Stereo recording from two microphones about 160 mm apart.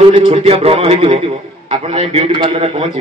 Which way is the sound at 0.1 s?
35° right (ahead or behind).